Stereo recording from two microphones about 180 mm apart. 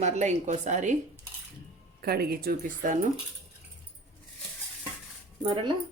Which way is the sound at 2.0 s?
60° right (ahead or behind).